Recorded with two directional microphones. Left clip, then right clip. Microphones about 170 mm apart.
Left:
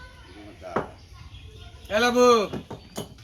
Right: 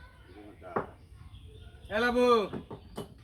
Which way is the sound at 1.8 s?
30° left (ahead or behind).